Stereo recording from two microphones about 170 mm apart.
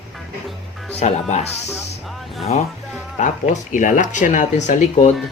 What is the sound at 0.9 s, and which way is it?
Speech, 40° left (ahead or behind).